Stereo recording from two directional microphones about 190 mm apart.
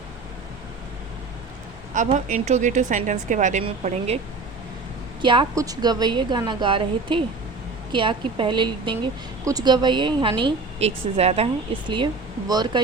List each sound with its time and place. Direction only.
1.9 s a woman's voice: 40° right (ahead or behind)
5.2 s a woman's voice: 25° right (ahead or behind)